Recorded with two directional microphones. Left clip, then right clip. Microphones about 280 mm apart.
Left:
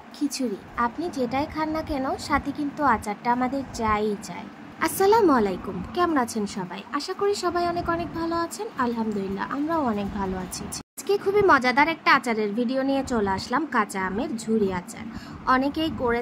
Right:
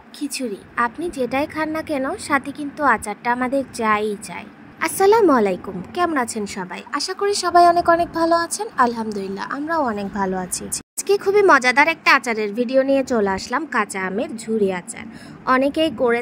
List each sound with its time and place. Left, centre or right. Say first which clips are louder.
0.2 s a woman's voice: right 1 dB; centre